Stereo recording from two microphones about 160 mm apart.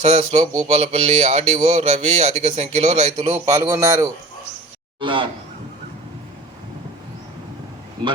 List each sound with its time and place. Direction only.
0.0 s speech: 45° right (ahead or behind)
3.4 s a man's voice: 20° right (ahead or behind)
4.9 s speech: 30° right (ahead or behind)